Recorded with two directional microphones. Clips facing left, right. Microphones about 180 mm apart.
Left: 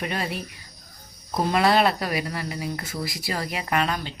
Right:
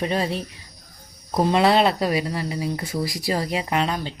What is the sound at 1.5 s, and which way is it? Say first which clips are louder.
A woman's voice: right 2 dB; 25° right (ahead or behind).